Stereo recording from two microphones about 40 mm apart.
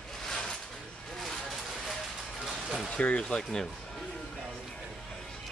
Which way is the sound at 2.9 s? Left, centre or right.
Left.